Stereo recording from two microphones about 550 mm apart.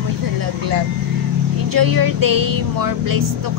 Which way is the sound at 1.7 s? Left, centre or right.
Right.